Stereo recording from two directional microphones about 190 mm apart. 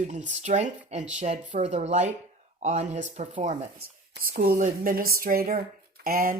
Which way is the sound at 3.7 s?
55° right (ahead or behind).